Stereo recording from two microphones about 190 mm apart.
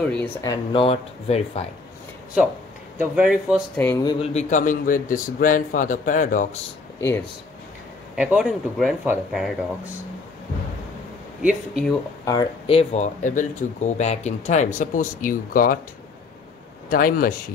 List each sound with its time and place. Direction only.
0.0 s speech: 10° left (ahead or behind)
0.7 s speech: 30° left (ahead or behind)
3.0 s speech: 5° right (ahead or behind)
3.7 s speech: 10° left (ahead or behind)
4.0 s speech: 25° left (ahead or behind)
4.3 s a man's voice: 40° left (ahead or behind)
8.2 s speech: centre (ahead or behind)
11.4 s speech: 5° right (ahead or behind)
12.3 s speech: 25° left (ahead or behind); by 15.8 s 50° left (ahead or behind)
16.9 s a man's voice: 50° left (ahead or behind)